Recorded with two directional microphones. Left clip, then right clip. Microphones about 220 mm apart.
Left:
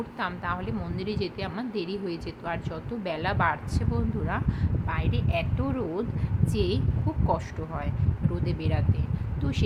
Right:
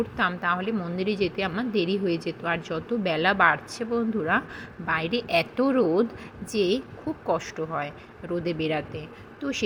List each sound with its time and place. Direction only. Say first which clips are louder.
0.2 s a woman's voice: right 5 dB; 10° right (ahead or behind)